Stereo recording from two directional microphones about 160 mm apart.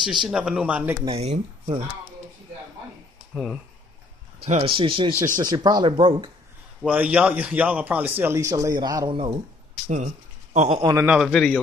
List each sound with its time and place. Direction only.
0.0 s a man's voice: 5° right (ahead or behind)
1.0 s a man's voice: 40° right (ahead or behind)
3.3 s a man's voice: 5° right (ahead or behind)
4.4 s a man's voice: 40° right (ahead or behind)
6.8 s a man's voice: 10° right (ahead or behind); by 9.4 s 35° right (ahead or behind)
9.8 s a sound: 45° right (ahead or behind)
10.8 s speech: 25° right (ahead or behind)
11.2 s a man's voice: 5° left (ahead or behind)